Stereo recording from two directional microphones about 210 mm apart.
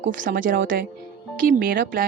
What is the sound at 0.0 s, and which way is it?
A woman's voice, 40° right (ahead or behind).